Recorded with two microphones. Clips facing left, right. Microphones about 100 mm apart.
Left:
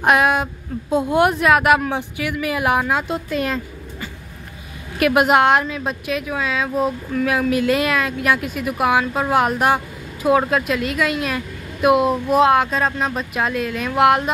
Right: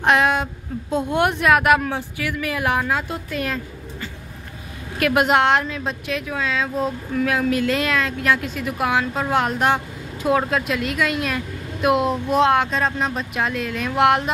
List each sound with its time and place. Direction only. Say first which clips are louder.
0.0 s speech: left 2 dB; 5° left (ahead or behind)
1.9 s speech: left 2 dB; 15° left (ahead or behind)
4.9 s a woman's voice: left 3 dB; 5° left (ahead or behind)